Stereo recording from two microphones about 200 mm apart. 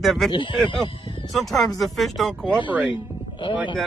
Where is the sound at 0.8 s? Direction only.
25° left (ahead or behind).